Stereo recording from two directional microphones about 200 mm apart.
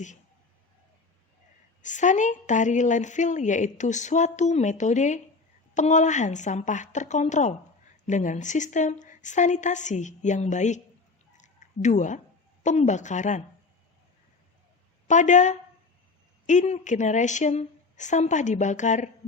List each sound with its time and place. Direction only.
1.8 s a woman's voice: 40° left (ahead or behind)
11.3 s a sound: 35° left (ahead or behind)
12.6 s a woman's voice: 35° left (ahead or behind)
15.0 s a woman's voice: 35° left (ahead or behind)